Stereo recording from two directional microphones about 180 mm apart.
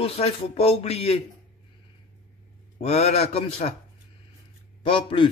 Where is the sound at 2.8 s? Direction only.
35° left (ahead or behind).